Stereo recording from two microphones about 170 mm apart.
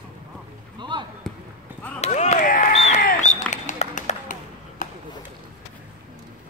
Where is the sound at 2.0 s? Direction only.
45° left (ahead or behind).